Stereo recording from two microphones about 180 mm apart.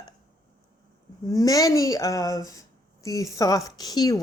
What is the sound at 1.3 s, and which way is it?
Speech, 20° left (ahead or behind).